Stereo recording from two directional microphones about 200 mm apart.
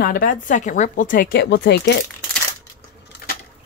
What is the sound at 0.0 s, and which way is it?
Speech, 45° left (ahead or behind).